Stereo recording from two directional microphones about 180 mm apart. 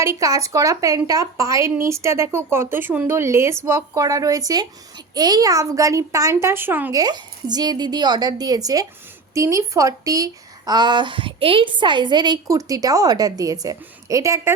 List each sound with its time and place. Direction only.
0.0 s a woman's voice: 15° right (ahead or behind)
7.0 s a woman's voice: 25° right (ahead or behind)